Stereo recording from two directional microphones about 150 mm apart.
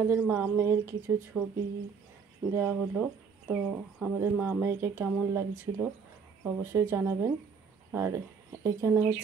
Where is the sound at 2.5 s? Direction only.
10° right (ahead or behind).